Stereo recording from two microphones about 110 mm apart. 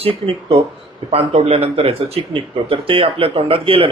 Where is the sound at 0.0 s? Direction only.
60° right (ahead or behind).